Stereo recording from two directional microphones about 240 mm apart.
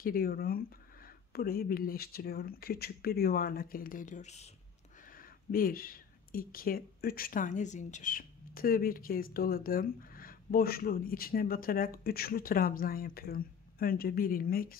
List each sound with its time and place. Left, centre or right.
0.0 s speech: left